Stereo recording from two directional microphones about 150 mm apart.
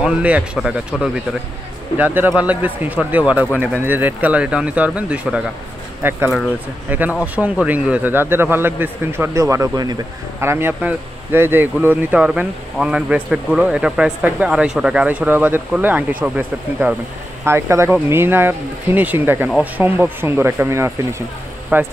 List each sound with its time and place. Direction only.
0.0 s a man's voice: 10° right (ahead or behind)